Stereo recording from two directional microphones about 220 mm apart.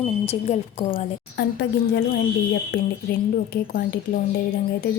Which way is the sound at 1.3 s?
45° left (ahead or behind).